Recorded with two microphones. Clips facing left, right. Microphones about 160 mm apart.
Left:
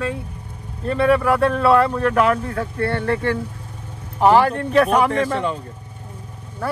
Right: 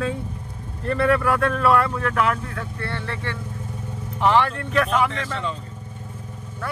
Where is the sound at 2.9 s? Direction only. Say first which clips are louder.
Left 11 dB; 50° left (ahead or behind).